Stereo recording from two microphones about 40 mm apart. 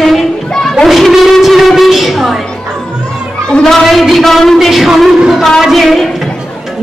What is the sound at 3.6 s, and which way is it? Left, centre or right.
A woman's voice, centre.